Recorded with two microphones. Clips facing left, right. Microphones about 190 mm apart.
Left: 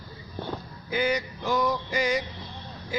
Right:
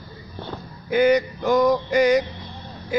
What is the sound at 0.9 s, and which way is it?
Speech, 60° right (ahead or behind).